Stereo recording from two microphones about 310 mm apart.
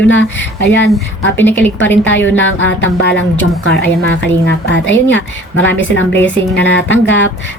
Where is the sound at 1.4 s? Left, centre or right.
Centre.